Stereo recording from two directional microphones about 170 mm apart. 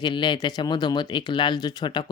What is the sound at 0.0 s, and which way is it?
Speech, 25° left (ahead or behind).